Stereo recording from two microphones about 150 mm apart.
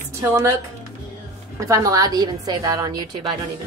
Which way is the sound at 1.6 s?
20° right (ahead or behind).